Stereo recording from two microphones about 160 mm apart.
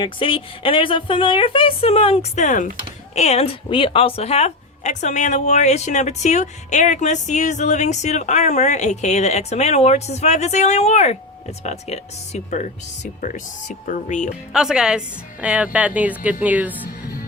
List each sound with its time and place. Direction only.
0.0 s a woman's voice: 35° left (ahead or behind); by 14.3 s 55° left (ahead or behind)
14.5 s a woman's voice: 5° right (ahead or behind)